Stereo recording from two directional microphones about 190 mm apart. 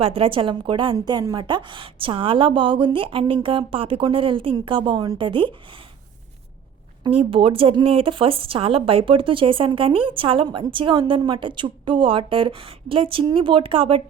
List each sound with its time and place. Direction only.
0.0 s a woman's voice: 30° right (ahead or behind)
7.0 s a woman's voice: 30° right (ahead or behind)